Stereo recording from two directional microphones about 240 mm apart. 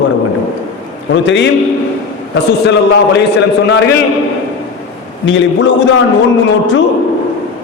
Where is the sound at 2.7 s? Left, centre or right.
Left.